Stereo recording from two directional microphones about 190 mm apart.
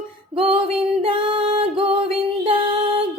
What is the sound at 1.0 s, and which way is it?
Music, 30° right (ahead or behind).